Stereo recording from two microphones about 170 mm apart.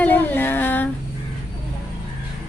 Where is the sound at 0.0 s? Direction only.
10° left (ahead or behind).